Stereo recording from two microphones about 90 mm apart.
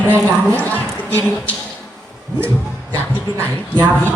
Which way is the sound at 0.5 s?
20° left (ahead or behind).